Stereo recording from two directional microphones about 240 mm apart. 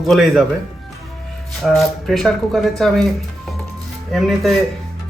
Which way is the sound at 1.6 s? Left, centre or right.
Centre.